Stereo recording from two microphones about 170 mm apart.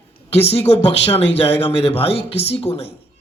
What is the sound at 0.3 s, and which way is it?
A man's voice, 35° left (ahead or behind).